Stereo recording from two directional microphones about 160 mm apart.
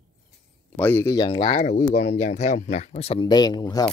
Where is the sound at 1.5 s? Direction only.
55° left (ahead or behind).